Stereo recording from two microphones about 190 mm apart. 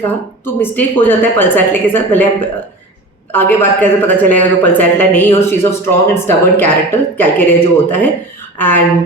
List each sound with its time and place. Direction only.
0.4 s speech: 10° left (ahead or behind)